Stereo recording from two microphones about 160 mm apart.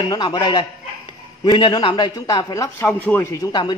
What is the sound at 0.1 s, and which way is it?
A man's voice, 25° left (ahead or behind).